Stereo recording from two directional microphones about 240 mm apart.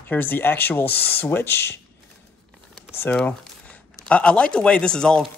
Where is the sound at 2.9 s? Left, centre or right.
Centre.